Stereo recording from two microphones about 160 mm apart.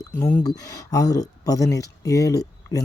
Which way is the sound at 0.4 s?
20° left (ahead or behind).